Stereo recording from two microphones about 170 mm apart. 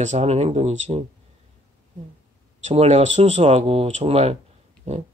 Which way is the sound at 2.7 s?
40° right (ahead or behind).